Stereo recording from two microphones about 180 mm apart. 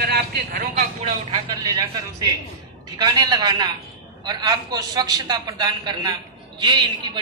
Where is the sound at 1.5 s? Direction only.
20° right (ahead or behind).